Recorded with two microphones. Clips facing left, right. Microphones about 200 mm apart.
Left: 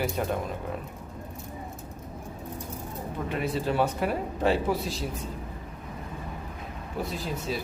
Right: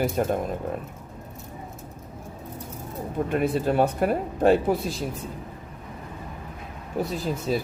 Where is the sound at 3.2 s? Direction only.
50° right (ahead or behind).